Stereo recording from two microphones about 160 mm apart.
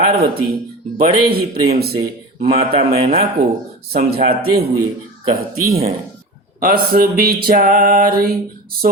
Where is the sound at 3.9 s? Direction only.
75° right (ahead or behind).